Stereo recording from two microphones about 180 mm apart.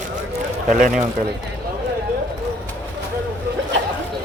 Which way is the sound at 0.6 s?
50° right (ahead or behind).